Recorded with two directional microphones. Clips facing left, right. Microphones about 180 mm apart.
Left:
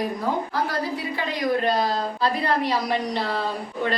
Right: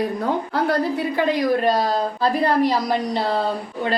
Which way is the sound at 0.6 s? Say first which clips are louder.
Right 7 dB; 55° right (ahead or behind).